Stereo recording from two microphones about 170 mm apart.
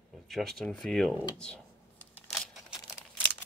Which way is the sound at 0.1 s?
Centre (ahead or behind).